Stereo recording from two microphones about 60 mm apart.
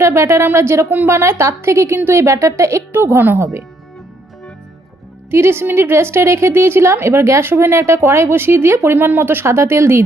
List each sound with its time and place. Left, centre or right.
0.0 s a woman's voice: right
2.9 s a woman's voice: right
5.3 s a woman's voice: right